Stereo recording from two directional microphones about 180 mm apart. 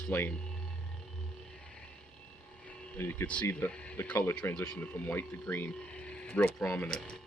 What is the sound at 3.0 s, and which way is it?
Speech, 10° left (ahead or behind).